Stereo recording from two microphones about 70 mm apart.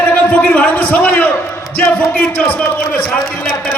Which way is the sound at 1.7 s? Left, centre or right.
Left.